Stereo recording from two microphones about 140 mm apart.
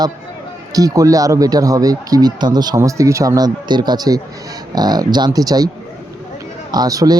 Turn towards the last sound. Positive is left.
turn(degrees=-25)  # may be behind; listen again after turning